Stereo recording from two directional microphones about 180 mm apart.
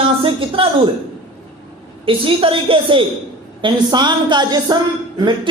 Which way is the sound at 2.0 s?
30° right (ahead or behind).